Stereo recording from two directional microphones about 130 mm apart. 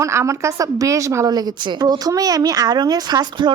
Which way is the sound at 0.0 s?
20° right (ahead or behind).